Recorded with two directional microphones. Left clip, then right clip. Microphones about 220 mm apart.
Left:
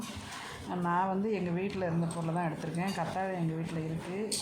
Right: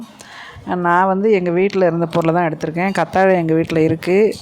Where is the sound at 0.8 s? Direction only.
40° right (ahead or behind).